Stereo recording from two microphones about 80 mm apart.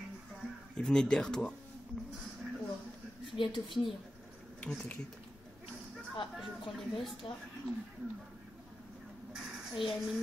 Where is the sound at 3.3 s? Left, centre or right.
Left.